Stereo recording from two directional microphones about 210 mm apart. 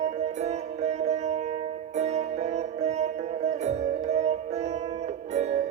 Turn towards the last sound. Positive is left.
turn(degrees=-30)  # may be behind; listen again after turning